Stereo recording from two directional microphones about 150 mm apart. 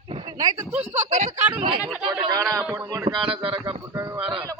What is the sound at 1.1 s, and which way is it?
Speech, 55° right (ahead or behind).